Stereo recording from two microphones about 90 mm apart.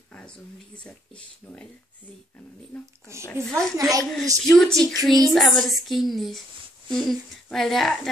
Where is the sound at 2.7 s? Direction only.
15° left (ahead or behind).